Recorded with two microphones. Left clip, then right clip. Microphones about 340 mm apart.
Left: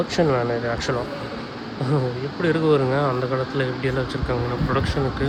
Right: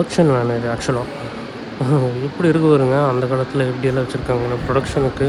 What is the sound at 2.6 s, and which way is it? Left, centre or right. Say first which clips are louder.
Speech: right 4 dB; right.